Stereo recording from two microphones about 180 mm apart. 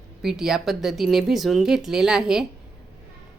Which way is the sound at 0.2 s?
Centre (ahead or behind).